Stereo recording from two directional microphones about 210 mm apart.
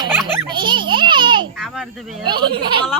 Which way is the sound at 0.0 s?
20° right (ahead or behind).